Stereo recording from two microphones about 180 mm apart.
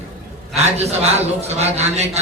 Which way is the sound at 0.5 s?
35° right (ahead or behind).